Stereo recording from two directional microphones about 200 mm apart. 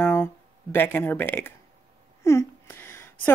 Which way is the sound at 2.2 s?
15° left (ahead or behind).